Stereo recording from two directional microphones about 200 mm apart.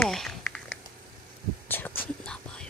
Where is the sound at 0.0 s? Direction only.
Centre (ahead or behind).